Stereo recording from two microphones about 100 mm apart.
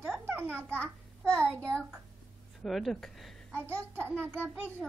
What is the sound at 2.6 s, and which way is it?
Speech, centre (ahead or behind).